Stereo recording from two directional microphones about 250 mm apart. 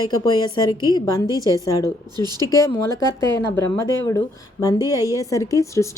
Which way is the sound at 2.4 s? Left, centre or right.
Centre.